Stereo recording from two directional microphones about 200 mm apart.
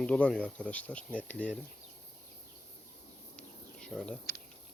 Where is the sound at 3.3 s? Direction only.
5° left (ahead or behind).